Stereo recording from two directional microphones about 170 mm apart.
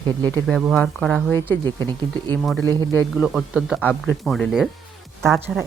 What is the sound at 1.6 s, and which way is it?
Speech, 25° right (ahead or behind).